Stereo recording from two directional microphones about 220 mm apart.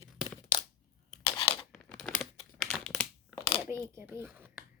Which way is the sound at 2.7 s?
5° left (ahead or behind).